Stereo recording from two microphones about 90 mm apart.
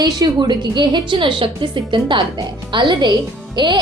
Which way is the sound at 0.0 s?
50° right (ahead or behind).